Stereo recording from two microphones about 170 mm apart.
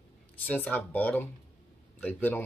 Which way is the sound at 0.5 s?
10° left (ahead or behind).